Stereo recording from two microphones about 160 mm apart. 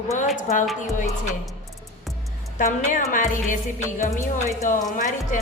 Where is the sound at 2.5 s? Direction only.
55° left (ahead or behind).